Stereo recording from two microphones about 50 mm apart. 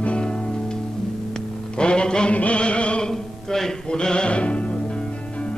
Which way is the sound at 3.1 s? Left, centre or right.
Centre.